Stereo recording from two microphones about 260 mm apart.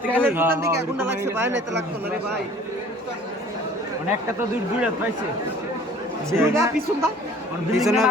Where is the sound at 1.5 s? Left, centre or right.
Right.